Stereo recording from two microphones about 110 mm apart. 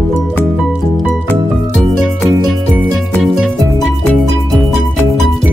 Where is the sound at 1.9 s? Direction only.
Centre (ahead or behind).